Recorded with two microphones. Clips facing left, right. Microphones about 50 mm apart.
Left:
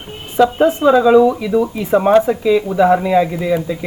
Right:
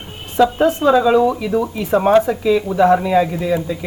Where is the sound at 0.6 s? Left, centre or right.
Centre.